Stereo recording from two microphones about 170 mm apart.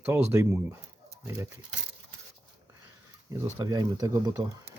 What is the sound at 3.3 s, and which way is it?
Speech, 20° right (ahead or behind).